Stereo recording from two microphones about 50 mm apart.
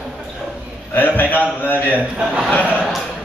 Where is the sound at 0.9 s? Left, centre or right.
Left.